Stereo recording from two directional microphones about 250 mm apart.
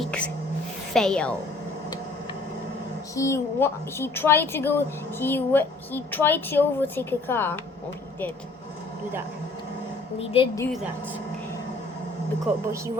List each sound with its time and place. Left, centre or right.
0.0 s a sound: centre
0.9 s a woman's voice: centre
3.2 s speech: centre
10.2 s a woman's voice: left